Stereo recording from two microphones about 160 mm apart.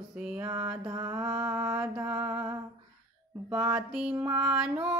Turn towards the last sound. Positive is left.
turn(degrees=-5)  # may be behind; listen again after turning